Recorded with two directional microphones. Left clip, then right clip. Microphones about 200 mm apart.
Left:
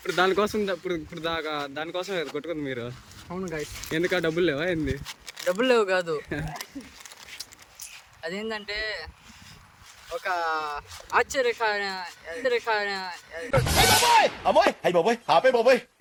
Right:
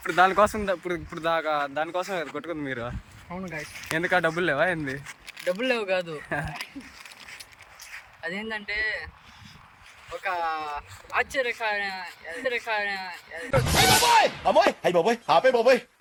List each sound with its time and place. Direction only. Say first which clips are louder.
0.0 s speech: right 3 dB; 10° left (ahead or behind)
5.5 s speech: left 4 dB; 15° left (ahead or behind)
6.1 s speech: right 1 dB; 5° left (ahead or behind)
8.2 s speech: even; 15° left (ahead or behind)
10.2 s speech: left 1 dB; 15° left (ahead or behind)
13.4 s speech: even; centre (ahead or behind)